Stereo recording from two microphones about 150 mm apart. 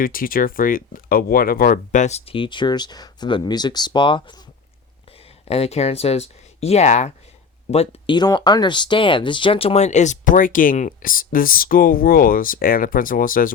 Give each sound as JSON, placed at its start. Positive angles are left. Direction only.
{"t": 0.0, "sound": "speech", "side_deg": 70}
{"t": 5.5, "sound": "speech", "side_deg": 45}
{"t": 8.1, "sound": "speech", "side_deg": 30}